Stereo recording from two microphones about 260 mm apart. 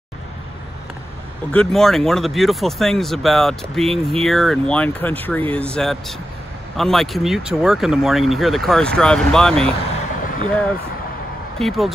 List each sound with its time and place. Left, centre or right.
1.5 s speech: centre
10.2 s vehicle: left
11.5 s speech: centre